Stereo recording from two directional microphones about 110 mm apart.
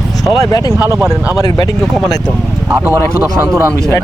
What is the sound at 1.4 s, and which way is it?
Speech, 35° left (ahead or behind).